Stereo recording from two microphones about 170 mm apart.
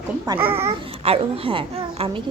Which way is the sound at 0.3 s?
20° right (ahead or behind).